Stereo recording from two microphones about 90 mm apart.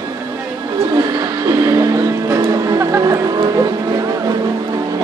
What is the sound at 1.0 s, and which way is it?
Music, 50° right (ahead or behind).